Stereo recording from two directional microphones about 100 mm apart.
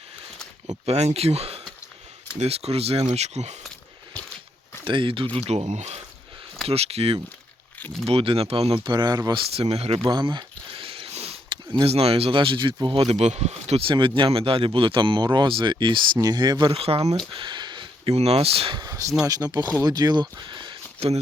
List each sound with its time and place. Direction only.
0.9 s speech: 90° right
4.9 s speech: 60° right (ahead or behind)
5.5 s speech: 90° right
8.0 s speech: 75° right (ahead or behind)
8.8 s speech: 50° right (ahead or behind)
9.6 s speech: 85° right
10.1 s a sound: 45° right (ahead or behind); by 11.3 s 85° right
11.4 s a sound: 50° right (ahead or behind)
11.9 s speech: 80° right
14.2 s speech: 65° right (ahead or behind); by 16.7 s 50° right (ahead or behind)
16.7 s speech: 80° right
17.3 s a sound: 55° right (ahead or behind)
18.1 s speech: 90° right
18.7 s speech: 40° right (ahead or behind)